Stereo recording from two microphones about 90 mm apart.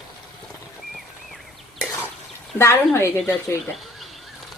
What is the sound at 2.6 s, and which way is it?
Speech, 30° left (ahead or behind).